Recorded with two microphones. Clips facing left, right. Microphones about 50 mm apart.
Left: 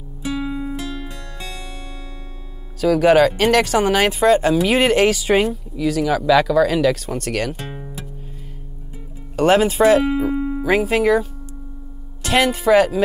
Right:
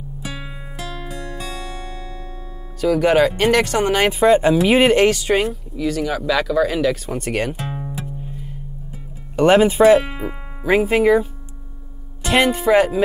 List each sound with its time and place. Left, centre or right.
0.4 s music: centre
1.1 s music: right
2.8 s speech: centre
7.7 s music: centre
9.4 s speech: right
9.8 s speech: centre
12.2 s music: centre
12.4 s speech: centre